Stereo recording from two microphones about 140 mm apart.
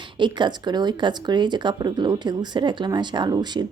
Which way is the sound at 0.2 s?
35° right (ahead or behind).